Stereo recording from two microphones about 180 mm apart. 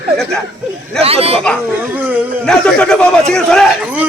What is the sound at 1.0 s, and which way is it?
Speech, 35° right (ahead or behind).